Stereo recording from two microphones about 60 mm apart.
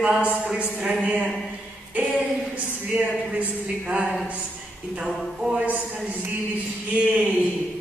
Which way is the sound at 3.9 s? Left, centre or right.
Centre.